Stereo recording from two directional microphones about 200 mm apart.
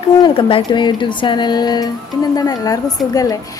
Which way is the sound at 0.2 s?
25° left (ahead or behind).